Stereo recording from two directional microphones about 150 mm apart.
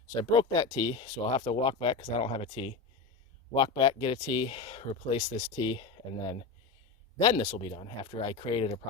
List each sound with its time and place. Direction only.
0.1 s speech: 25° left (ahead or behind)